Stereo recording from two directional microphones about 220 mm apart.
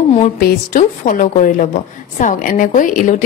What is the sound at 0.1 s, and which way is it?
A woman's voice, 35° left (ahead or behind).